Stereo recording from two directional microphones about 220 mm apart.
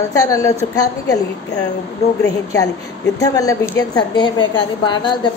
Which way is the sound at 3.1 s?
15° left (ahead or behind).